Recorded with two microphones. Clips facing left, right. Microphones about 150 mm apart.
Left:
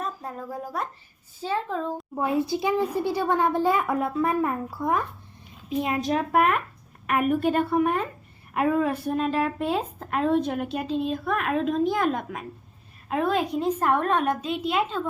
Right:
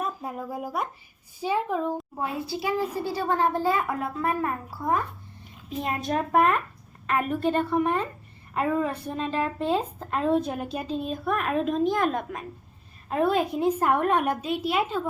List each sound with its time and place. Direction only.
0.0 s speech: 10° right (ahead or behind)
2.5 s a child's voice: 20° left (ahead or behind)
5.6 s a woman's voice: centre (ahead or behind)